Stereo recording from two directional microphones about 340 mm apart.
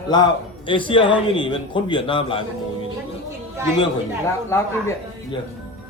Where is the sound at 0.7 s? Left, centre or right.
Centre.